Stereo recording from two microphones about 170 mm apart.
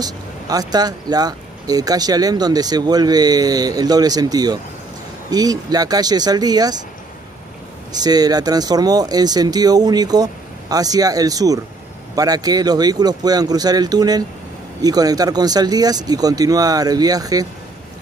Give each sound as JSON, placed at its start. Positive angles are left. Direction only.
{"t": 0.0, "sound": "speech", "side_deg": -20}
{"t": 7.9, "sound": "speech", "side_deg": -25}